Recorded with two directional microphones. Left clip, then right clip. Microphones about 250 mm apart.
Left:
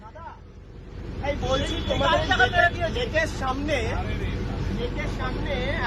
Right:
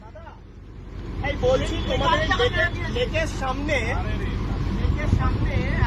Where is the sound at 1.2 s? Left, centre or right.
Left.